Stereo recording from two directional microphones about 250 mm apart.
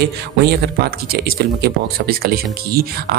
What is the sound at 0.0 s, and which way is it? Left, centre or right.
Speech, right.